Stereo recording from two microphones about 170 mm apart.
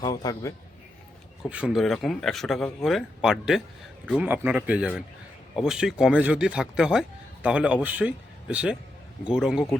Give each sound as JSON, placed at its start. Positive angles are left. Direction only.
{"t": 0.0, "sound": "a man's voice", "side_deg": 25}
{"t": 1.5, "sound": "speech", "side_deg": -5}